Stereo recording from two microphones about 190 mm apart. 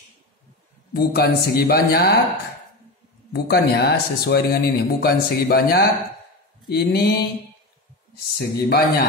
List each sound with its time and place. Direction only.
0.9 s speech: 55° left (ahead or behind)
3.3 s speech: 60° left (ahead or behind)
8.4 s speech: 55° left (ahead or behind)